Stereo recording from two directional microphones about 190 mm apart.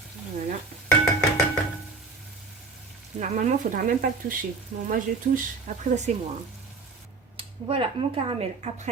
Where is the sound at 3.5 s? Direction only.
45° right (ahead or behind).